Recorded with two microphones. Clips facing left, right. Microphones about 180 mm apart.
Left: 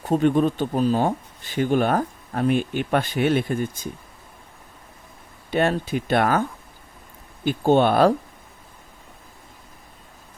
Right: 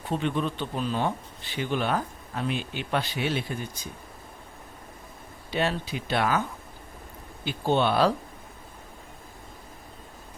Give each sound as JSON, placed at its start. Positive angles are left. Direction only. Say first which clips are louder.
{"t": 0.0, "sound": "speech", "louder": "left 9 dB", "side_deg": 45}
{"t": 5.5, "sound": "speech", "louder": "left 6 dB", "side_deg": 50}
{"t": 7.4, "sound": "speech", "louder": "left 7 dB", "side_deg": 50}